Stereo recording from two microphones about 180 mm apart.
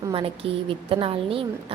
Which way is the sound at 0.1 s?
30° right (ahead or behind).